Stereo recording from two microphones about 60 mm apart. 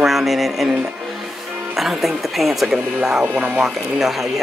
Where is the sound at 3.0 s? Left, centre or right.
Centre.